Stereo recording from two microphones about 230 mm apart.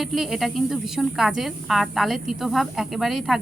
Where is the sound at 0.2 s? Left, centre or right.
Centre.